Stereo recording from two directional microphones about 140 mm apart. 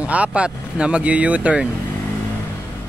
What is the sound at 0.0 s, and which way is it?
Speech, 10° right (ahead or behind).